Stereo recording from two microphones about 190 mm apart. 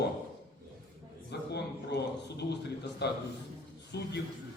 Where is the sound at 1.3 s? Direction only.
60° left (ahead or behind).